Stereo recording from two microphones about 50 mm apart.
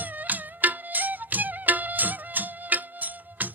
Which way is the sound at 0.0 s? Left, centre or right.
Right.